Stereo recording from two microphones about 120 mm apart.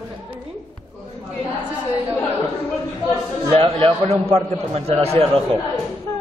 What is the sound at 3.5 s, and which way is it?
A man's voice, 55° right (ahead or behind).